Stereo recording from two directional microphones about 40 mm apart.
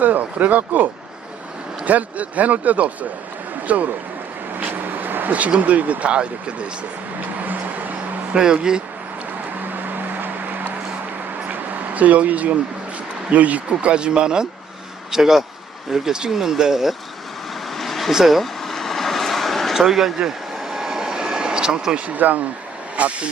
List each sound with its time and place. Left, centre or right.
0.0 s speech: right
4.7 s vehicle: right
5.5 s speech: right
7.3 s a sound: right
8.3 s speech: centre
9.7 s vehicle: right
11.4 s a sound: right
13.3 s speech: right
15.1 s speech: centre
17.7 s vehicle: centre
18.1 s vehicle: centre
19.7 s speech: centre
20.1 s vehicle: centre
21.9 s speech: right